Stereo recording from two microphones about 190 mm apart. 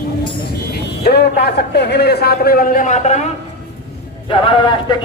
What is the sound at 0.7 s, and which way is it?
A man's voice, 55° left (ahead or behind).